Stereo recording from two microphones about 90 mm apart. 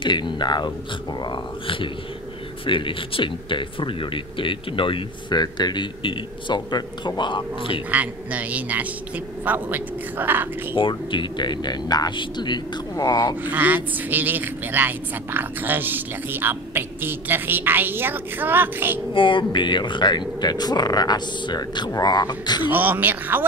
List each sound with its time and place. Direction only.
0.0 s a man's voice: 60° left (ahead or behind)
5.4 s a man's voice: 55° left (ahead or behind); by 7.8 s 70° left (ahead or behind)
7.9 s speech: 15° right (ahead or behind)
10.7 s a man's voice: 65° left (ahead or behind); by 13.4 s 50° left (ahead or behind)
13.4 s speech: 20° right (ahead or behind)
19.1 s speech: 70° left (ahead or behind); by 22.6 s 50° left (ahead or behind)
22.6 s speech: 20° right (ahead or behind)